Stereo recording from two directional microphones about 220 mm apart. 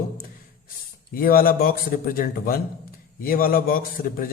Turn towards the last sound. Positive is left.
turn(degrees=40)  # may be behind; listen again after turning